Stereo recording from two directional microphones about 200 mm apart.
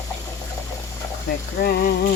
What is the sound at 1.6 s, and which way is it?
Speech, 50° left (ahead or behind).